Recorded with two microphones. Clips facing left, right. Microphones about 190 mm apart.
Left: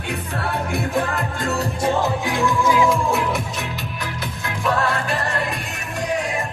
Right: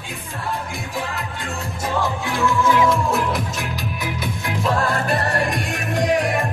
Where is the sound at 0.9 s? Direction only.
55° left (ahead or behind).